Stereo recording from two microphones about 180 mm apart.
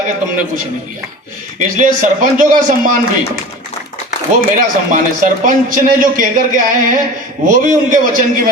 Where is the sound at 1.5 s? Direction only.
50° right (ahead or behind).